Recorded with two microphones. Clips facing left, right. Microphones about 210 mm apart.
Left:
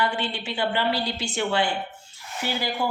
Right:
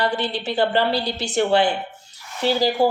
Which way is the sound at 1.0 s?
70° right (ahead or behind).